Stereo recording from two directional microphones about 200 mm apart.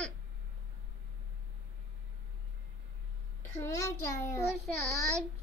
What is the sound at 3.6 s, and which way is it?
Speech, 15° left (ahead or behind).